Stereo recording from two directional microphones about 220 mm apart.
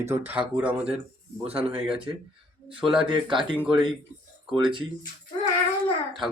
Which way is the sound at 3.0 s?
20° right (ahead or behind).